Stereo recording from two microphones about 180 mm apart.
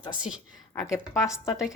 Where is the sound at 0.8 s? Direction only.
Centre (ahead or behind).